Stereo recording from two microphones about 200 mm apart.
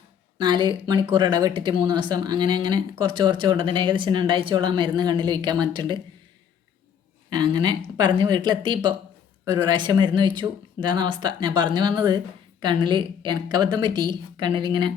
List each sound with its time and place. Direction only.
0.3 s speech: 20° right (ahead or behind)
7.3 s speech: 20° right (ahead or behind)